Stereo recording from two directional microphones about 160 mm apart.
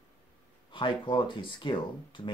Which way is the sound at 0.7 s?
30° left (ahead or behind).